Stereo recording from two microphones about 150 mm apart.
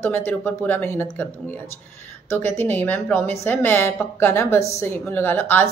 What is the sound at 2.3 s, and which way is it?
A woman's voice, 15° left (ahead or behind).